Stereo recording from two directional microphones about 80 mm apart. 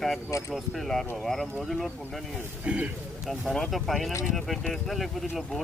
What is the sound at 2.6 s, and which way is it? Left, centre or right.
Speech, centre.